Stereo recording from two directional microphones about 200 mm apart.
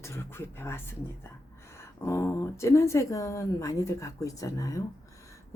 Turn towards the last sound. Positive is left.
turn(degrees=15)  # may be behind; listen again after turning